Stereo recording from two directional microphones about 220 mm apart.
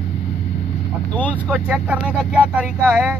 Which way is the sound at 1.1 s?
5° left (ahead or behind).